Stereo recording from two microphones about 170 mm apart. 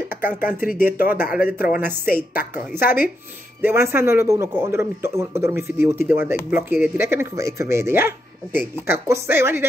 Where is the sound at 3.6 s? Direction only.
15° right (ahead or behind).